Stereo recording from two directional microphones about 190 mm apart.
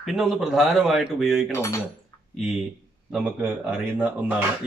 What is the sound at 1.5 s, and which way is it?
Speech, 15° left (ahead or behind).